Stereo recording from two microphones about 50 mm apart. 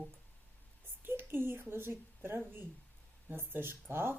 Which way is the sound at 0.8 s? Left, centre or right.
Right.